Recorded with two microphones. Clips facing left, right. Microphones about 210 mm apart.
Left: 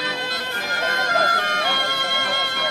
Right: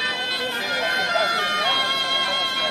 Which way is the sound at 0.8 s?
50° left (ahead or behind).